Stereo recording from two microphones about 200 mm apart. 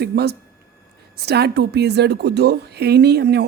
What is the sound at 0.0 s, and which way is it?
A woman's voice, 55° right (ahead or behind).